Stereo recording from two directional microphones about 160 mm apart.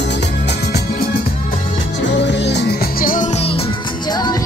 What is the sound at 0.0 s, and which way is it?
Music, 90° left.